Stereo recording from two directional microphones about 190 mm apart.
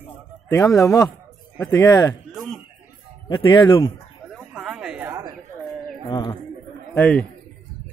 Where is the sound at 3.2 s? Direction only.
25° left (ahead or behind).